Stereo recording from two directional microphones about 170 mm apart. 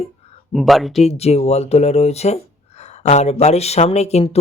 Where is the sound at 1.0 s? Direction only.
40° left (ahead or behind).